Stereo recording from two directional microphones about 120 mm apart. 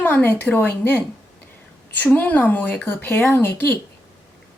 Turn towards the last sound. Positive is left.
turn(degrees=15)  # may be behind; listen again after turning